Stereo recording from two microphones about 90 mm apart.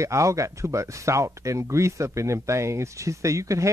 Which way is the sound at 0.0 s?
35° right (ahead or behind).